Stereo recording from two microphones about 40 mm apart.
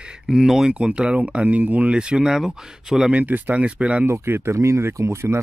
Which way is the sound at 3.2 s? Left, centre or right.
Right.